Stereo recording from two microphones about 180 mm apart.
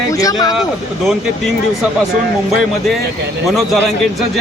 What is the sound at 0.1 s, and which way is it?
Speech, 20° left (ahead or behind).